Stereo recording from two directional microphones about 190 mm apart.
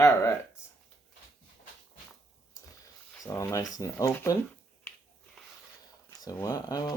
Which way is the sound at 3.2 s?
15° left (ahead or behind).